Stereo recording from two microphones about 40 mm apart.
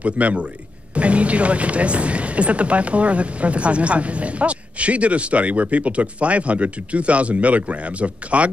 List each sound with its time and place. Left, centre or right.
0.0 s speech: right